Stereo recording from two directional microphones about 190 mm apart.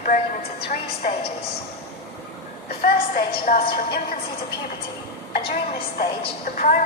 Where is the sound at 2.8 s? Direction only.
50° left (ahead or behind).